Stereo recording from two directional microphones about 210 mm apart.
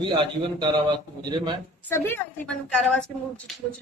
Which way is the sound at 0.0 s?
20° right (ahead or behind).